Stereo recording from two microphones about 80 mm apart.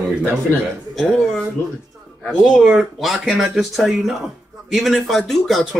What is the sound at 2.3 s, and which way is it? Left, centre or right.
Speech, centre.